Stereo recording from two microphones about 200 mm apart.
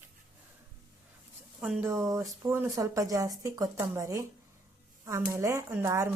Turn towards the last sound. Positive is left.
turn(degrees=-15)  # may be behind; listen again after turning